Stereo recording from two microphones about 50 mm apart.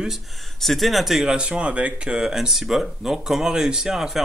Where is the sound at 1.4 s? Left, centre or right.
Right.